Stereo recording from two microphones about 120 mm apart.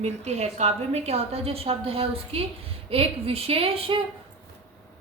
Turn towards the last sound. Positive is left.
turn(degrees=-55)  # may be behind; listen again after turning